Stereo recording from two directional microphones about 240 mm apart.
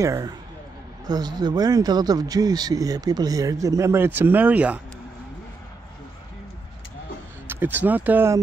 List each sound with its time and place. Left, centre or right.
0.0 s speech: centre
7.4 s speech: centre